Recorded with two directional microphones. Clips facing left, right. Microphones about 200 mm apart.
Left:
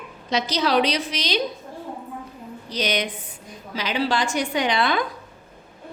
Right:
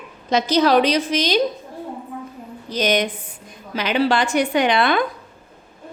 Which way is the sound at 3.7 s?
60° right (ahead or behind).